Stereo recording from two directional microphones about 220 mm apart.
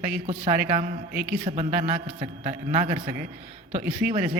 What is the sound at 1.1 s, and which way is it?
Speech, 5° right (ahead or behind).